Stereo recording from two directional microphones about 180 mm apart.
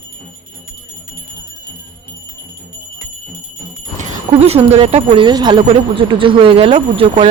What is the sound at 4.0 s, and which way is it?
Speech, 35° right (ahead or behind).